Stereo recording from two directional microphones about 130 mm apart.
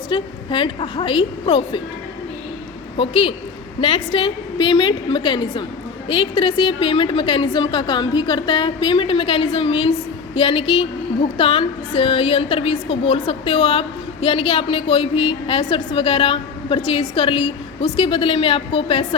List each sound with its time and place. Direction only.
0.1 s a woman's voice: 40° left (ahead or behind)
3.0 s a woman's voice: 45° left (ahead or behind)